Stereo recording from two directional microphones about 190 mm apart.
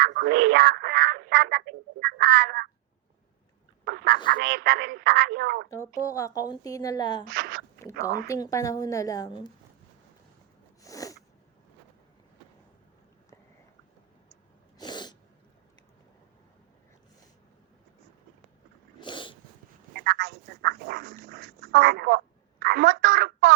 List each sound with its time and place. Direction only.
0.1 s speech: 60° right (ahead or behind)
3.8 s duck: 55° right (ahead or behind)
4.3 s speech: 50° right (ahead or behind)
5.7 s a woman's voice: 15° left (ahead or behind)
7.3 s speech: 55° right (ahead or behind)
7.8 s a woman's voice: 15° left (ahead or behind)
10.8 s sneeze: 15° left (ahead or behind)
14.8 s sneeze: 25° left (ahead or behind)
18.9 s dog: 25° left (ahead or behind)
19.9 s dog: 55° right (ahead or behind)
22.6 s a sound: 60° right (ahead or behind)